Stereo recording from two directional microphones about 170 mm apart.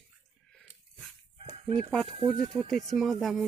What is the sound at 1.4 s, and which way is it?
Chicken, 40° right (ahead or behind).